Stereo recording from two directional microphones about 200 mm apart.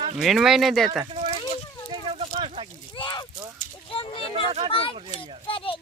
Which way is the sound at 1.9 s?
25° right (ahead or behind).